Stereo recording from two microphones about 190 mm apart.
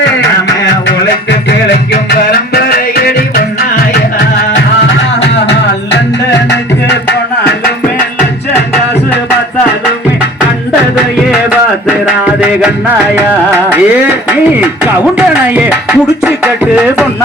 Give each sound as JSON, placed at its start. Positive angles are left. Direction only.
{"t": 2.5, "sound": "music", "side_deg": 55}
{"t": 6.5, "sound": "music", "side_deg": 65}
{"t": 12.0, "sound": "music", "side_deg": -5}